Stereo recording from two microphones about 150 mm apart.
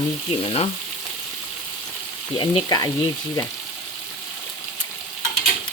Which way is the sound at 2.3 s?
30° left (ahead or behind).